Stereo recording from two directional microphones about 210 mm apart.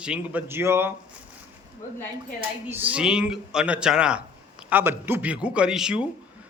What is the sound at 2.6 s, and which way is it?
Speech, 10° right (ahead or behind).